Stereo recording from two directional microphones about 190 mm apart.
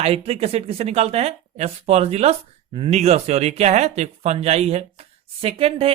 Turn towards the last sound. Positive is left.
turn(degrees=-30)  # may be behind; listen again after turning